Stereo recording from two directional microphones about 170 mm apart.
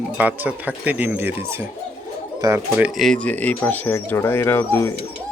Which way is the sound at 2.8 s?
Centre (ahead or behind).